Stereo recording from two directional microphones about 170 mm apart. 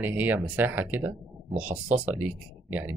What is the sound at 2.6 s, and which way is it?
Speech, 10° right (ahead or behind).